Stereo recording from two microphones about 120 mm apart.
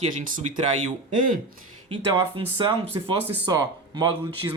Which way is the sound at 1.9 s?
45° right (ahead or behind).